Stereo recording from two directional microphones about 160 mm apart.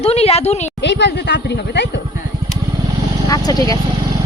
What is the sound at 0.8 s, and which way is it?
Speech, 90° left.